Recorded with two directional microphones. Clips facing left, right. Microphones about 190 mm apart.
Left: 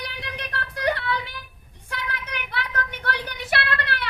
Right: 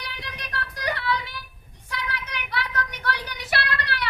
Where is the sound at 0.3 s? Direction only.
55° left (ahead or behind).